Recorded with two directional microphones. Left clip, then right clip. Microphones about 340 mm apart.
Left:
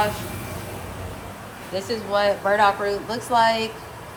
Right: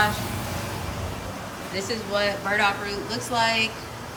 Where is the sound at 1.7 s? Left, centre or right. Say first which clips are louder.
Left 4 dB; centre.